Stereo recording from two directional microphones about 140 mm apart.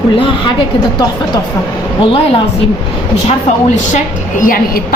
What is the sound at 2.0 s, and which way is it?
Speech, 40° left (ahead or behind).